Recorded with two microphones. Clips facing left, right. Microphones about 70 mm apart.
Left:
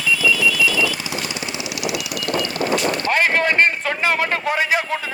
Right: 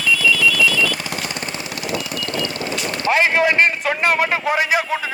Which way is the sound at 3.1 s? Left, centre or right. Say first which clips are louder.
Right 4 dB; centre.